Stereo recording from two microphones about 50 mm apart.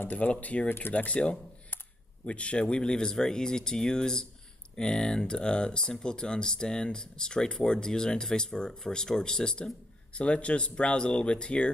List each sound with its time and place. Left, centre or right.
0.1 s speech: left
0.7 s speech: left
0.9 s speech: left